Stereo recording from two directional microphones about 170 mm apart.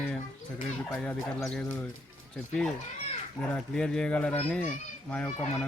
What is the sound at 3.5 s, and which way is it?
Speech, 5° left (ahead or behind).